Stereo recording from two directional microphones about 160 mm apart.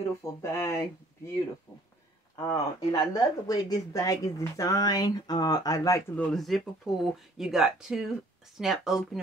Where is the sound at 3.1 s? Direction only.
20° left (ahead or behind).